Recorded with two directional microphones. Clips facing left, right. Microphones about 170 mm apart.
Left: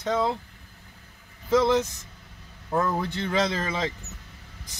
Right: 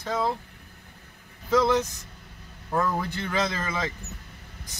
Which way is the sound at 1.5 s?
25° left (ahead or behind).